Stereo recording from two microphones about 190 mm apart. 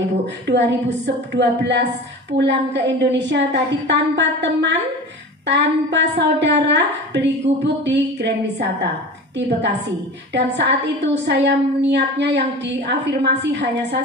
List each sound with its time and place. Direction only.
0.5 s a woman's voice: 65° right (ahead or behind)
7.5 s music: 35° right (ahead or behind)
7.8 s a sound: 65° right (ahead or behind)
10.3 s a woman's voice: 65° right (ahead or behind)